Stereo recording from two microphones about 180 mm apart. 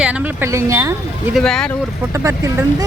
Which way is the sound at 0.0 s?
10° right (ahead or behind).